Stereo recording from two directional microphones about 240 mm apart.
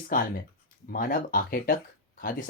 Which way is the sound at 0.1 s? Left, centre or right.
Left.